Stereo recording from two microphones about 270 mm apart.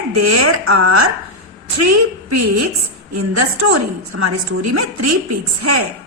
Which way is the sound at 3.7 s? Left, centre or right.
Right.